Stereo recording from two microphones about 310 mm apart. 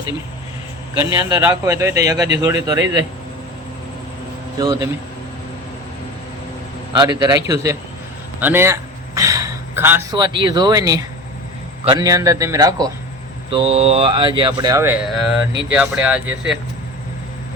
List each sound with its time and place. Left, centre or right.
0.9 s speech: centre
4.6 s speech: centre
6.9 s a man's voice: centre